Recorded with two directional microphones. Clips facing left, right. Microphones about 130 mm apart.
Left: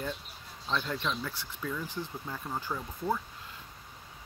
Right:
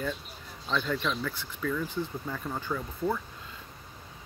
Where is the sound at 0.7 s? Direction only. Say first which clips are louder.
Right 3 dB; 15° left (ahead or behind).